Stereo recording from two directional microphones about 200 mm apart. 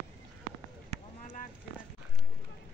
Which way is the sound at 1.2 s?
40° left (ahead or behind).